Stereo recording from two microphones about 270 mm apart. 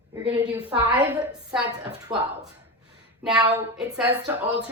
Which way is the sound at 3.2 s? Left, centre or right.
Centre.